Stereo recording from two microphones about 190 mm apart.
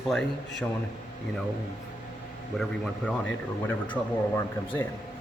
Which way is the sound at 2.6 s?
Centre (ahead or behind).